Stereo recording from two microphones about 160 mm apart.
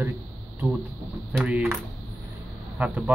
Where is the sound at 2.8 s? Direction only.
10° right (ahead or behind).